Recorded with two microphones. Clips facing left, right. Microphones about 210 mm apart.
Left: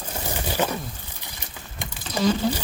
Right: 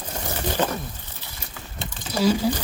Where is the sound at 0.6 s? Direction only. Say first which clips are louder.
Even; 10° left (ahead or behind).